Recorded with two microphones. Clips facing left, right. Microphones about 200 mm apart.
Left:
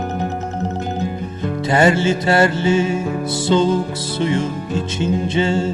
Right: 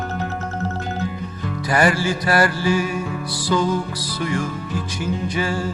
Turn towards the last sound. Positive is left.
turn(degrees=25)  # may be behind; listen again after turning